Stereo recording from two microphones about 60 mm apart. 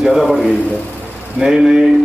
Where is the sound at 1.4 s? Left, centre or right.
Centre.